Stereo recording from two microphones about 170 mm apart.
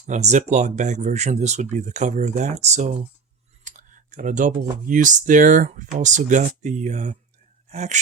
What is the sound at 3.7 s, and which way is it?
Clicking, 45° right (ahead or behind).